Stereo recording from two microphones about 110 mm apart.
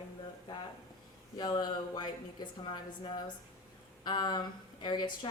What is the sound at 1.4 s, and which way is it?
A woman's voice, 40° left (ahead or behind).